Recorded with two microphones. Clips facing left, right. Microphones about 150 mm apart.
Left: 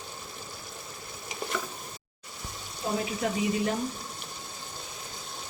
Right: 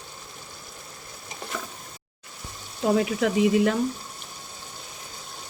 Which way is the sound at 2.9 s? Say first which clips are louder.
Right 6 dB; 90° right.